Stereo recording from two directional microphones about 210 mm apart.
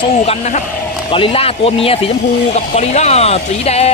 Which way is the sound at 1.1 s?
25° left (ahead or behind).